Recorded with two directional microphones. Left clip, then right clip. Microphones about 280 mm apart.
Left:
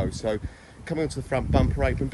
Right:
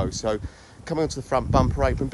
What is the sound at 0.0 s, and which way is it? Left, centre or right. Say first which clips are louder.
Speech: right 2 dB; centre.